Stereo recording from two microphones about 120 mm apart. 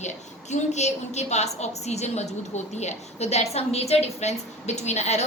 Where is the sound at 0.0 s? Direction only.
75° left (ahead or behind).